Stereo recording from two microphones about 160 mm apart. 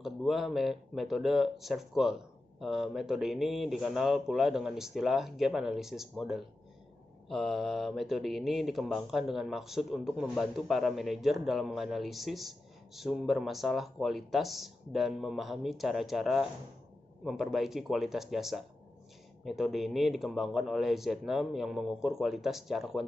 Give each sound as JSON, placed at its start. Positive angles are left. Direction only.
{"t": 0.0, "sound": "speech", "side_deg": 0}